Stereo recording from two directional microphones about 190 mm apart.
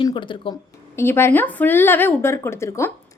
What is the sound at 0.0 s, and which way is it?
Speech, 25° left (ahead or behind).